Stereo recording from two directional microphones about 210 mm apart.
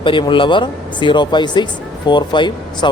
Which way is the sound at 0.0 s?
25° left (ahead or behind).